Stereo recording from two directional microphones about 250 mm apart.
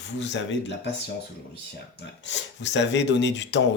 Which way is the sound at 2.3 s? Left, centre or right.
Left.